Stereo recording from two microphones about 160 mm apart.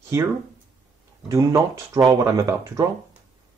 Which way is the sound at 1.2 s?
20° right (ahead or behind).